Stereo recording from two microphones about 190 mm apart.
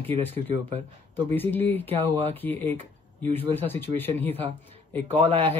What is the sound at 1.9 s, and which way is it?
Speech, 35° right (ahead or behind).